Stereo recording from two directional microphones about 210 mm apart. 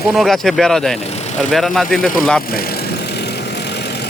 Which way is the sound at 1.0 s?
30° left (ahead or behind).